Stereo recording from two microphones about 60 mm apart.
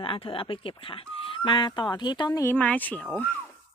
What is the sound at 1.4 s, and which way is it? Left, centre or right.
Speech, left.